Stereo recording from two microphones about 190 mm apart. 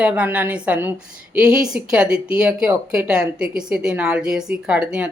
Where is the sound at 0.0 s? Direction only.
10° right (ahead or behind).